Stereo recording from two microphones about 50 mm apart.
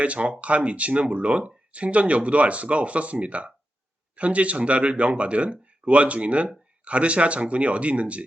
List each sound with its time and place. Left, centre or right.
0.0 s speech: right